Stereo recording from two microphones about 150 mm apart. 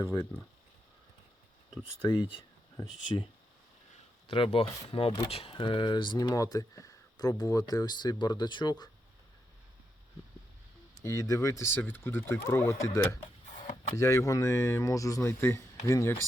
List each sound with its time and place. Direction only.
0.0 s speech: 20° left (ahead or behind)
1.8 s speech: 30° left (ahead or behind)
4.3 s speech: 40° left (ahead or behind)
11.0 s speech: 20° left (ahead or behind)
13.6 s a sound: 55° left (ahead or behind)
13.9 s speech: 20° left (ahead or behind)